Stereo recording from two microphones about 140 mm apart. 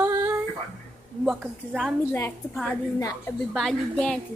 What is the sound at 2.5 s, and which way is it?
Speech, 10° left (ahead or behind).